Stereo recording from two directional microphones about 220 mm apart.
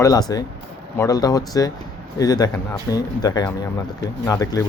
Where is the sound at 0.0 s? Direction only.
15° left (ahead or behind).